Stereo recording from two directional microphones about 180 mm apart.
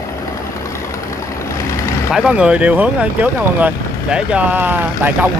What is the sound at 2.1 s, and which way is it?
Speech, 5° right (ahead or behind).